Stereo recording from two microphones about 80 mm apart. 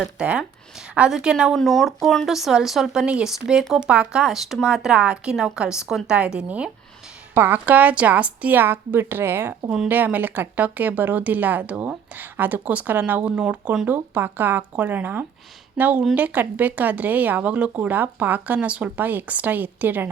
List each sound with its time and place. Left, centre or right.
0.0 s a woman's voice: centre
1.5 s a woman's voice: centre
7.3 s a woman's voice: right